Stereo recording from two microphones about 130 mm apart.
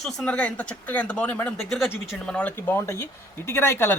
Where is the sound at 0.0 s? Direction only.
5° left (ahead or behind).